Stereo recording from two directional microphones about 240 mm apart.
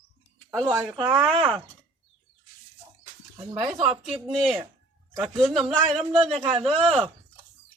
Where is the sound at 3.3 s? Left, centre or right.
Centre.